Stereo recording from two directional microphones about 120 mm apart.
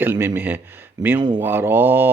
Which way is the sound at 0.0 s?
15° right (ahead or behind).